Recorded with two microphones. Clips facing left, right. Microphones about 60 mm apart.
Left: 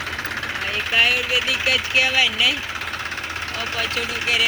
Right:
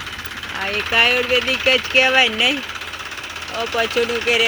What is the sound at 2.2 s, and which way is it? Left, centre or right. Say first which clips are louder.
Speech: right 2 dB; right.